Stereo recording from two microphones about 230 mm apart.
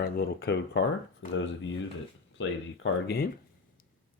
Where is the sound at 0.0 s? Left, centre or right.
Left.